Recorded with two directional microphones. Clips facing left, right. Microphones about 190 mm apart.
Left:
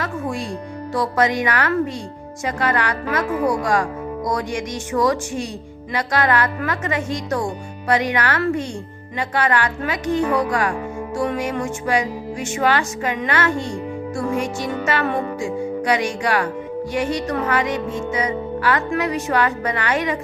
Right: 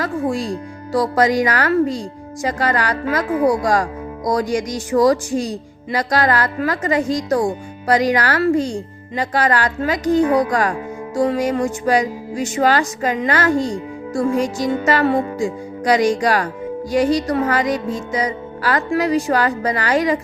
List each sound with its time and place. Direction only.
0.0 s music: 35° right (ahead or behind)